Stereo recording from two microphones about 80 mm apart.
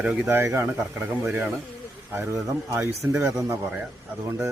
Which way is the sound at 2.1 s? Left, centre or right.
Right.